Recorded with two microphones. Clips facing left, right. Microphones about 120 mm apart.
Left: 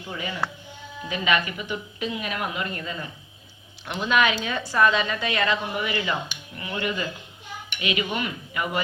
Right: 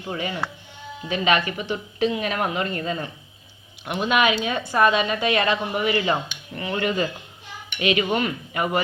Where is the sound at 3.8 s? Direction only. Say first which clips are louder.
Right 2 dB; 20° right (ahead or behind); by 8.6 s 45° right (ahead or behind).